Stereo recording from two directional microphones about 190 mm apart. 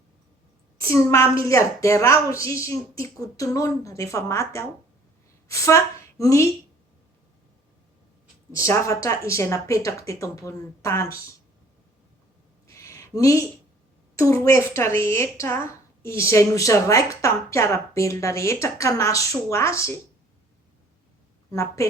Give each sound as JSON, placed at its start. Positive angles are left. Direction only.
{"t": 0.8, "sound": "a woman's voice", "side_deg": 15}
{"t": 8.5, "sound": "a woman's voice", "side_deg": 15}
{"t": 12.6, "sound": "a sound", "side_deg": 15}
{"t": 14.4, "sound": "a woman's voice", "side_deg": 15}
{"t": 21.5, "sound": "a woman's voice", "side_deg": 15}